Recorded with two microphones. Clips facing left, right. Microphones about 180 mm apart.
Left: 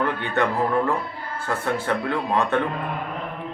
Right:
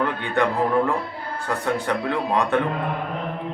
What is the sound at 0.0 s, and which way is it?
Music, 15° right (ahead or behind).